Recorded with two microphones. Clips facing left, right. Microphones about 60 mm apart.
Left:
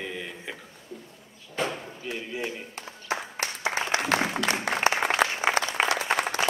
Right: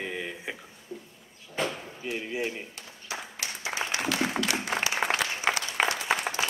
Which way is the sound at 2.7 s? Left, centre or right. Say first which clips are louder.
Left 6 dB; left.